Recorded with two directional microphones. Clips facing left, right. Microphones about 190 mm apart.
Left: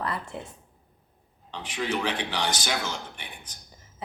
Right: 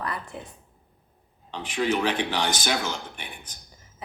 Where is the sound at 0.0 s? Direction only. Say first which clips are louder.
Left 1 dB; 25° left (ahead or behind).